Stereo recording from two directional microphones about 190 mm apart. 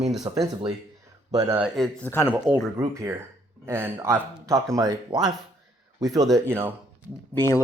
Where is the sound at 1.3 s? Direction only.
15° right (ahead or behind).